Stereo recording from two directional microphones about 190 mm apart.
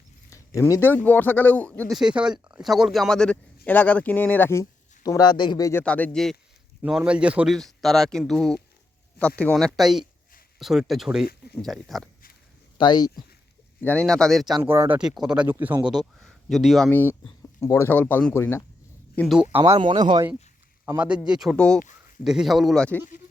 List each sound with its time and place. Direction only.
0.3 s zipper: 15° left (ahead or behind)
1.0 s speech: 10° left (ahead or behind)
2.0 s speech: 5° right (ahead or behind); by 5.8 s 20° left (ahead or behind)
5.8 s speech: 5° left (ahead or behind)
6.8 s a man's voice: 5° right (ahead or behind)
12.7 s speech: 25° left (ahead or behind)
13.8 s a man's voice: 5° left (ahead or behind)
14.6 s a man's voice: 10° right (ahead or behind); by 19.4 s 5° left (ahead or behind)
19.7 s speech: 25° right (ahead or behind)
20.8 s a man's voice: 10° right (ahead or behind)